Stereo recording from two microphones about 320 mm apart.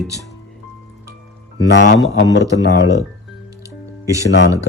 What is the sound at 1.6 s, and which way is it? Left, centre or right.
Speech, left.